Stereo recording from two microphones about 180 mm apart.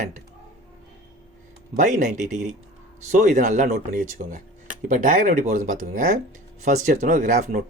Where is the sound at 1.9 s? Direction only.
45° right (ahead or behind).